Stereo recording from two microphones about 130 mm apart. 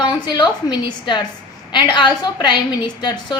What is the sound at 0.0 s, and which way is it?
A woman's voice, 35° left (ahead or behind).